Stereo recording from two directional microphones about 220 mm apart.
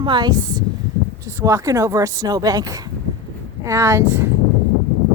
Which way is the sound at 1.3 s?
15° right (ahead or behind).